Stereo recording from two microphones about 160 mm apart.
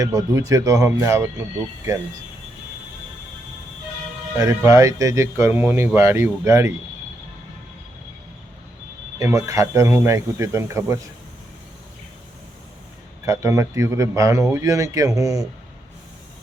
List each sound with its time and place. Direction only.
0.0 s speech: 20° right (ahead or behind)
4.4 s speech: 20° right (ahead or behind)
9.1 s speech: 20° right (ahead or behind)
13.2 s speech: 20° right (ahead or behind)